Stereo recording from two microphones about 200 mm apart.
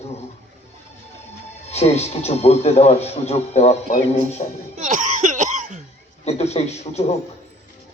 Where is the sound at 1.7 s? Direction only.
30° left (ahead or behind).